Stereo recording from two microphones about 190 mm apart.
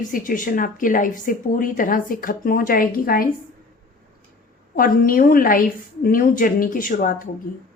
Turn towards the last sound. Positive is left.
turn(degrees=45)  # may be behind; listen again after turning